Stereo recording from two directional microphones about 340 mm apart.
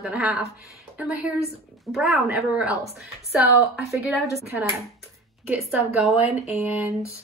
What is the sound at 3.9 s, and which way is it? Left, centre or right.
Speech, centre.